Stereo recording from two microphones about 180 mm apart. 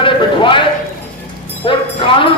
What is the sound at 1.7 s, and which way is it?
Speech, 30° left (ahead or behind).